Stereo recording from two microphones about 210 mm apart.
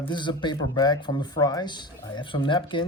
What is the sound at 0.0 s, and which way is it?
Speech, 20° left (ahead or behind).